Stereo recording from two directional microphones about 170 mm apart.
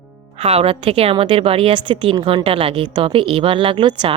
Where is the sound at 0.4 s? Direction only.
35° right (ahead or behind).